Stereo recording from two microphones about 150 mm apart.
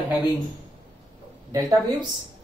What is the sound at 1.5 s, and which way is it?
Speech, 25° right (ahead or behind).